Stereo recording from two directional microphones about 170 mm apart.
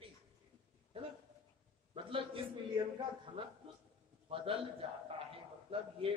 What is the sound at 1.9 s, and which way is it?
Speech, 30° right (ahead or behind).